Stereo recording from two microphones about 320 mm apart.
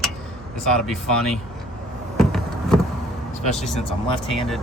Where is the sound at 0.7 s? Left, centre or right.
Centre.